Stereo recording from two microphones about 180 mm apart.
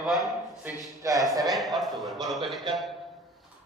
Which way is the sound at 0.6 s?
20° right (ahead or behind).